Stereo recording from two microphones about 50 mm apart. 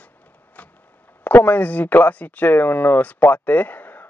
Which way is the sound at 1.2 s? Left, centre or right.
Left.